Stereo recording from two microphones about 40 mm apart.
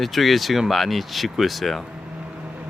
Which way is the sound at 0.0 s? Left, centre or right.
Centre.